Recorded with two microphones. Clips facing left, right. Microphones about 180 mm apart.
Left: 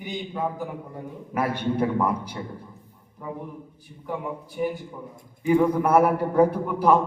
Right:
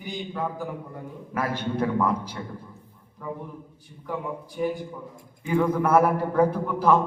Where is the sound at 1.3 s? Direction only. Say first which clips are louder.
Left 3 dB; 15° left (ahead or behind).